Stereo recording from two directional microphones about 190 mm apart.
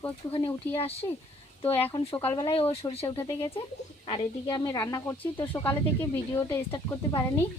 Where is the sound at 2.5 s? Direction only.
30° left (ahead or behind).